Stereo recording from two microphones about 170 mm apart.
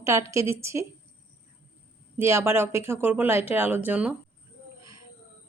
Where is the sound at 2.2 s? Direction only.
15° right (ahead or behind).